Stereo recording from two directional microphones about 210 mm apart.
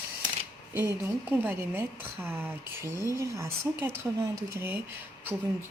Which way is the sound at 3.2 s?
15° right (ahead or behind).